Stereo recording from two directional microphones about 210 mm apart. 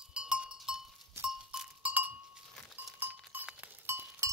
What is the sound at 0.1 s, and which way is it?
Goat, 5° right (ahead or behind).